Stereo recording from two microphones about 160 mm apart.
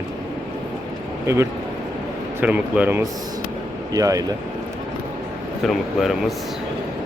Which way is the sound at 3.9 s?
20° right (ahead or behind).